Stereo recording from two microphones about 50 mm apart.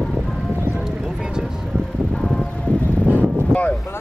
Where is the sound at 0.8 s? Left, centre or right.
Centre.